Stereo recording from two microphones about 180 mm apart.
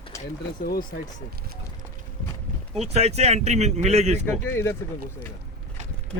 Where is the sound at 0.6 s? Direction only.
55° left (ahead or behind).